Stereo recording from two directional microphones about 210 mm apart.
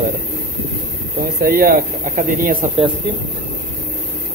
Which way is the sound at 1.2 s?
45° right (ahead or behind).